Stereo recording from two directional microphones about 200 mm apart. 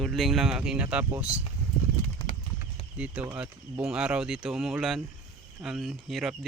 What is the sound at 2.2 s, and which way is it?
Clip-clop, 25° left (ahead or behind).